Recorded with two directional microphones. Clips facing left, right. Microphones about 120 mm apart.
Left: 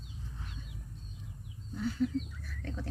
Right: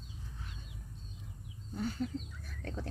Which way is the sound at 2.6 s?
40° right (ahead or behind).